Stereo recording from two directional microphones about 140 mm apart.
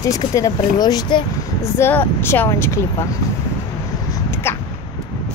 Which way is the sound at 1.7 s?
15° left (ahead or behind).